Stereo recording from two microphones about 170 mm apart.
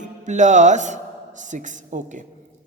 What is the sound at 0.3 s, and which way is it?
A woman's voice, 45° right (ahead or behind).